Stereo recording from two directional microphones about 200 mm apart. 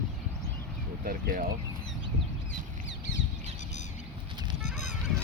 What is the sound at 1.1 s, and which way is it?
Speech, 45° right (ahead or behind).